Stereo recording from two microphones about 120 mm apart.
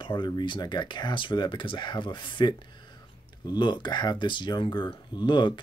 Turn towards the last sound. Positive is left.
turn(degrees=40)  # may be behind; listen again after turning